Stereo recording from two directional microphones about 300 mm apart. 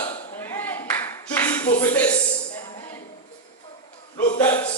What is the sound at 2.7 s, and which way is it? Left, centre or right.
Music, centre.